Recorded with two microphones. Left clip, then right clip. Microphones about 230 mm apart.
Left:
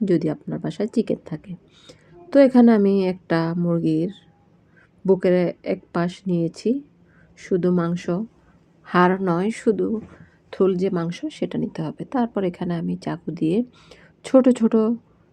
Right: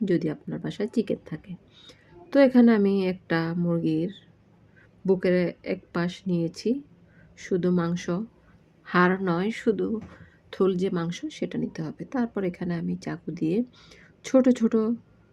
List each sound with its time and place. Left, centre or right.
0.0 s speech: centre